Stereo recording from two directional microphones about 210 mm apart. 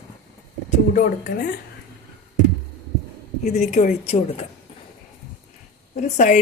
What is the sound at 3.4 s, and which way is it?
Speech, 30° left (ahead or behind).